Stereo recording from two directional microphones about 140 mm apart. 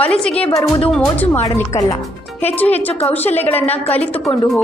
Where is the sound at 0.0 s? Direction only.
5° left (ahead or behind).